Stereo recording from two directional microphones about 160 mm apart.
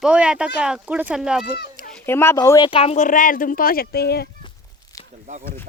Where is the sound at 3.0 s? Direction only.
55° left (ahead or behind); by 4.2 s 80° left.